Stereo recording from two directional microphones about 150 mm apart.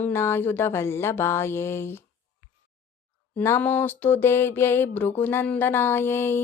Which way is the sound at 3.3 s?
15° left (ahead or behind).